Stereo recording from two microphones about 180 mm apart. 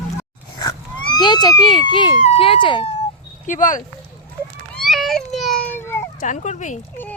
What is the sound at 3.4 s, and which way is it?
Speech, 45° left (ahead or behind).